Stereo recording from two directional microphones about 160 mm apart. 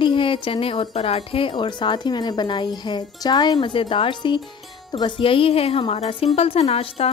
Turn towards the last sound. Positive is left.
turn(degrees=40)  # may be behind; listen again after turning